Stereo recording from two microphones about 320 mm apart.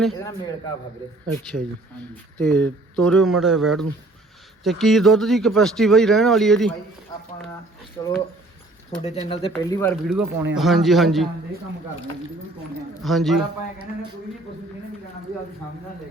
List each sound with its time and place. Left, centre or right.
0.0 s speech: centre
7.1 s a sound: centre
8.0 s speech: centre
9.5 s speech: centre
13.0 s speech: centre